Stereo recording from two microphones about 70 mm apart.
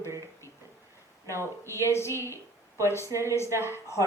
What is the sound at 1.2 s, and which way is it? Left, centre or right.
Speech, right.